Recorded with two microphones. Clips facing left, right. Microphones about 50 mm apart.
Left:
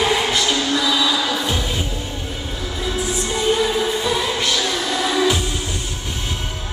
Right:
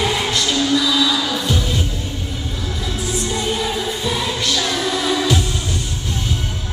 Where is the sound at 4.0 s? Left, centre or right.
Centre.